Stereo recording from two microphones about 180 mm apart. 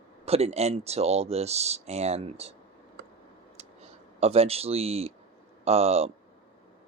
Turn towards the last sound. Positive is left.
turn(degrees=-35)  # may be behind; listen again after turning